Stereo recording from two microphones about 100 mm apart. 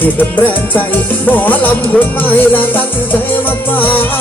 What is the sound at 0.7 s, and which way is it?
Music, 20° left (ahead or behind).